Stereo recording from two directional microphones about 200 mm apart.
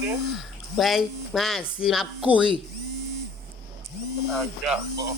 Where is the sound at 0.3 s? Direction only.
Centre (ahead or behind).